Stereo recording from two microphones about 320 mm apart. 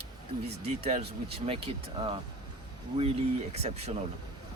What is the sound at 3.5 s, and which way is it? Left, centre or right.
Speech, centre.